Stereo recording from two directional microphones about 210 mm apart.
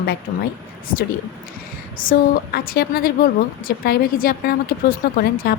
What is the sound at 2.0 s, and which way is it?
A woman's voice, 45° left (ahead or behind).